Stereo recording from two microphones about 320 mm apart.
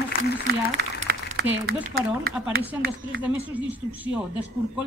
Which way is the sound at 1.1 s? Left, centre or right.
Right.